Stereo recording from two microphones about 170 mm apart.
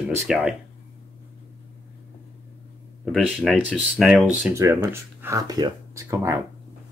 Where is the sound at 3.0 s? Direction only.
Centre (ahead or behind).